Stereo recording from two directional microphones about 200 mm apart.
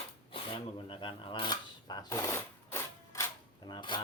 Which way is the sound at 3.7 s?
25° left (ahead or behind).